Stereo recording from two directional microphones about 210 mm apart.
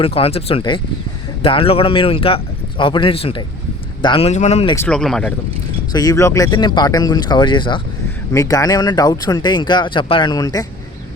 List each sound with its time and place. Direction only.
0.0 s speech: 25° left (ahead or behind)
4.7 s speech: 5° left (ahead or behind)
5.9 s speech: 15° left (ahead or behind)